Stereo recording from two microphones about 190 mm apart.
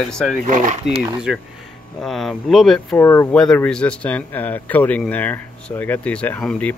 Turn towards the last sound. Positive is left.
turn(degrees=5)  # may be behind; listen again after turning